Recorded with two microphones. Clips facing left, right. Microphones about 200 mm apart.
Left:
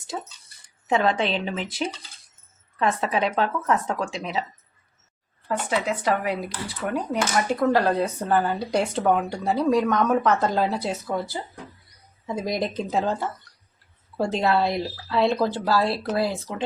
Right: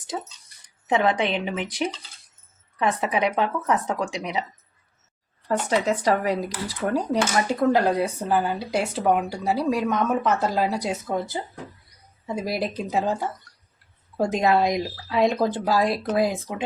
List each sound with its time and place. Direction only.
0.9 s speech: 15° right (ahead or behind)
5.5 s speech: 40° right (ahead or behind)
7.7 s speech: 15° right (ahead or behind)
12.5 s speech: 5° right (ahead or behind)